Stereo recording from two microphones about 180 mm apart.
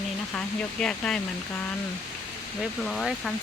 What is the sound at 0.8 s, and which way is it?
Speech, 5° left (ahead or behind).